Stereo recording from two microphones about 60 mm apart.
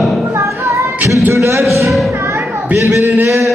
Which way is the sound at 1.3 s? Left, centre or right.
Right.